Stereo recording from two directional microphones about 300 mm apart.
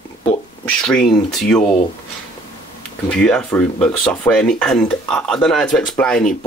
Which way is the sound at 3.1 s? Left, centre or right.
Centre.